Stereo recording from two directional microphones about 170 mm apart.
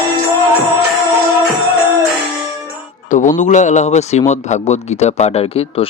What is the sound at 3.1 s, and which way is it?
A man's voice, 50° left (ahead or behind).